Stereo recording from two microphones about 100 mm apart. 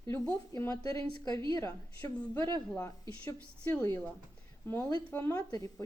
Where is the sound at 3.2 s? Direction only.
15° left (ahead or behind).